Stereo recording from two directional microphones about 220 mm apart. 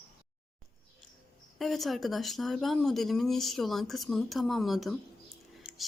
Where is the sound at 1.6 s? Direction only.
Centre (ahead or behind).